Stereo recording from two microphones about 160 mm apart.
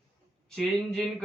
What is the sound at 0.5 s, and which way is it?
Speech, 5° left (ahead or behind).